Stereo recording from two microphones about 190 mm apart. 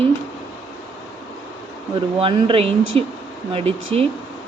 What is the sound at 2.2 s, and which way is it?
Speech, 30° right (ahead or behind).